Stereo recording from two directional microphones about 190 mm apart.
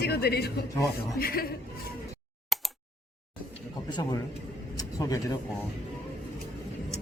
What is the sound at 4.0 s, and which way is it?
A man's voice, 20° left (ahead or behind).